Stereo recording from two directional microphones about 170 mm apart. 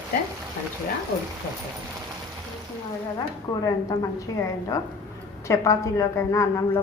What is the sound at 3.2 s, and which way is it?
Speech, 20° left (ahead or behind).